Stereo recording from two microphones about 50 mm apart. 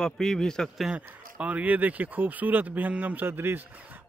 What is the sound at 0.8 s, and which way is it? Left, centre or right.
A man's voice, right.